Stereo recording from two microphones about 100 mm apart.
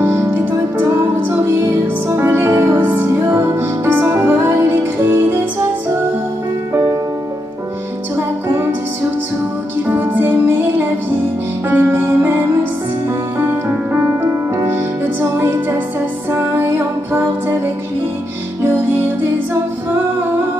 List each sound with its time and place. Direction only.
0.0 s music: 25° right (ahead or behind)
9.8 s music: 20° right (ahead or behind)
14.2 s music: 35° right (ahead or behind)
14.7 s music: 20° right (ahead or behind)
18.6 s music: 25° right (ahead or behind)